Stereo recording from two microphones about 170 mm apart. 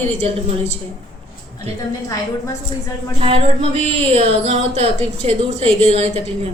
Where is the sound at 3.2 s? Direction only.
35° right (ahead or behind).